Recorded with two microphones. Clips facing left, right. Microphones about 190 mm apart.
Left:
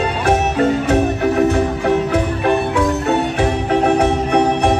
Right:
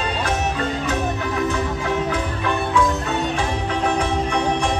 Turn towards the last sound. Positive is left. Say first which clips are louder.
# left 6 dB
turn(degrees=60)  # may be behind; listen again after turning